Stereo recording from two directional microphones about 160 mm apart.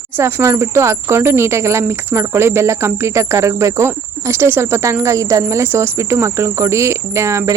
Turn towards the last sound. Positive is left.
turn(degrees=-20)  # may be behind; listen again after turning